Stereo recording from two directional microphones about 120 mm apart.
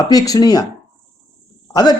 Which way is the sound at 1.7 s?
30° left (ahead or behind).